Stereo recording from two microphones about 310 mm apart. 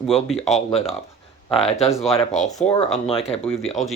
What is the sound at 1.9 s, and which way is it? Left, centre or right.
Speech, centre.